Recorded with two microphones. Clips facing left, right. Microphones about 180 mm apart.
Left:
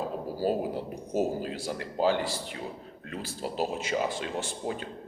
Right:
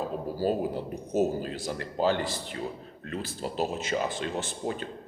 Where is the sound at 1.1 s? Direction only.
10° left (ahead or behind).